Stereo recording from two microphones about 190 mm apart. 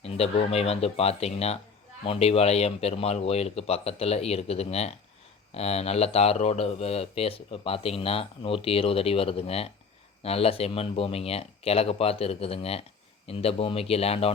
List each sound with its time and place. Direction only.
0.0 s speech: 30° left (ahead or behind)